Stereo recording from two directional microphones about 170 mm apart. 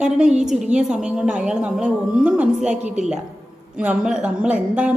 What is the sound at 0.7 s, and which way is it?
A woman's voice, 5° right (ahead or behind).